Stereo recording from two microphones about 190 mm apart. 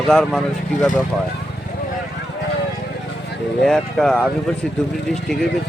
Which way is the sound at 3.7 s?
5° left (ahead or behind).